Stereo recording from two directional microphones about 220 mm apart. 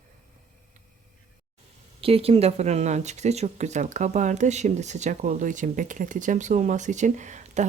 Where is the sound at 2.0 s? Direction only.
25° right (ahead or behind).